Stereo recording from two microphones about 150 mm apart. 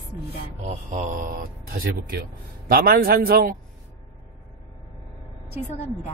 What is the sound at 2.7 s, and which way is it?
Speech, 85° right.